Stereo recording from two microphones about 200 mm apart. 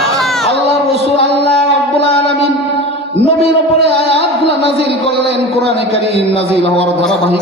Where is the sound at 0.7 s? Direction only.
30° left (ahead or behind).